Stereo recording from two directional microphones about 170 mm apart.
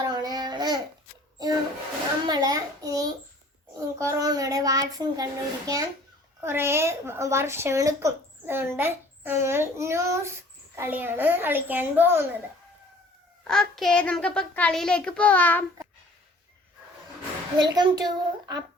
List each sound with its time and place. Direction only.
0.1 s babbling: 25° right (ahead or behind)
2.2 s a sound: 25° right (ahead or behind)
3.8 s child singing: 20° right (ahead or behind)
6.4 s a woman's voice: 15° right (ahead or behind)
13.5 s a child's voice: centre (ahead or behind)
17.6 s a woman's voice: 25° right (ahead or behind)